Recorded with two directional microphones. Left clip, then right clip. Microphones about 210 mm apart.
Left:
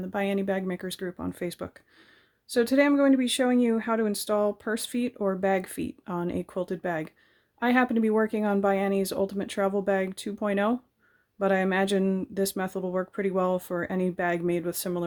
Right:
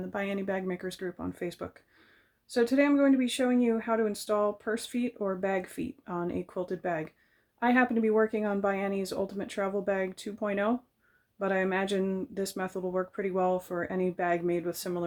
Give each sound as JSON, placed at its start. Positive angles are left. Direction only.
{"t": 0.0, "sound": "speech", "side_deg": 35}